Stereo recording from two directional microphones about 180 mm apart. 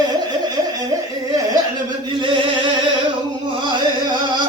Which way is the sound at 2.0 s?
25° right (ahead or behind).